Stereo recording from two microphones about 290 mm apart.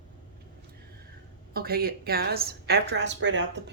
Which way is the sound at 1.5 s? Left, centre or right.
Right.